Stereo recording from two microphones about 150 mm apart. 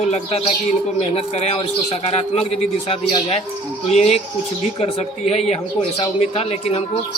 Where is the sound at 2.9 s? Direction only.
40° left (ahead or behind).